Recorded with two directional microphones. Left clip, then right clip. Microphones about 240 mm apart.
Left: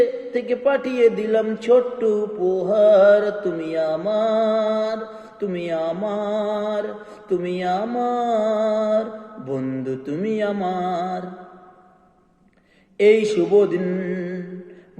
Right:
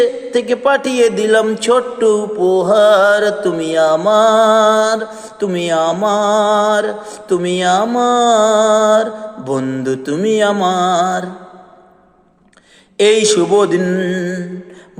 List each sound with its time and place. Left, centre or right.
0.3 s mantra: centre
2.4 s music: right
2.6 s mantra: centre
13.0 s mantra: centre
13.7 s music: right